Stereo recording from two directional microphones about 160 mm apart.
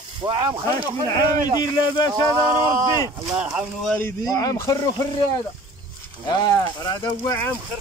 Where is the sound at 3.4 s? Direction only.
5° right (ahead or behind).